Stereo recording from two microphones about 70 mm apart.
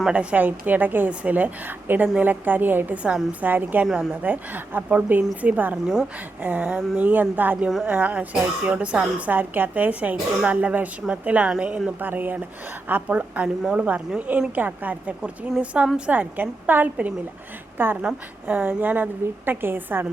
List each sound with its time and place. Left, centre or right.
0.1 s a woman's voice: centre
5.7 s speech: centre
6.4 s a woman's voice: right
6.7 s speech: centre
7.1 s a woman's voice: right
7.9 s a woman's voice: centre
11.9 s a woman's voice: right